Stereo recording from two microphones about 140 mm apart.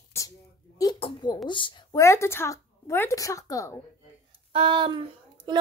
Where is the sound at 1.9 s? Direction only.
20° left (ahead or behind).